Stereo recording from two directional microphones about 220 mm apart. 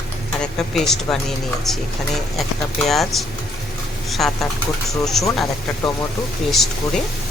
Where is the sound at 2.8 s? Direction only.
Centre (ahead or behind).